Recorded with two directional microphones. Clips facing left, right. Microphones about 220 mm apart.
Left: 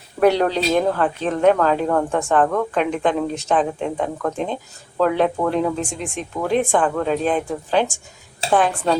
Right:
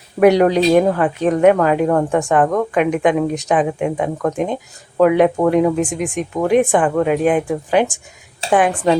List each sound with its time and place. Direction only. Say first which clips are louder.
0.2 s a woman's voice: right 5 dB; 10° right (ahead or behind)